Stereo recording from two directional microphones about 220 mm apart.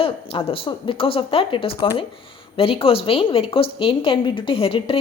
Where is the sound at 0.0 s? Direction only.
25° left (ahead or behind).